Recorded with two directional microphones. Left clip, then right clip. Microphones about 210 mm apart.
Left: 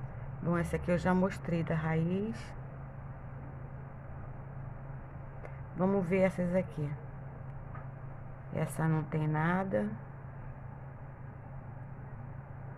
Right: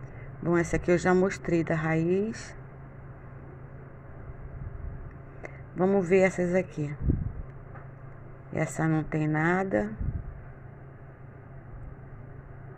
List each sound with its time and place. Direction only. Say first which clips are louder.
0.5 s speech: right 8 dB; 20° right (ahead or behind)
5.8 s speech: right 7 dB; 15° right (ahead or behind)
8.5 s speech: right 7 dB; 20° right (ahead or behind)